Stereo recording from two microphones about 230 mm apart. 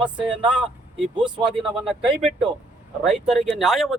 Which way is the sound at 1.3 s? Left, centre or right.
Right.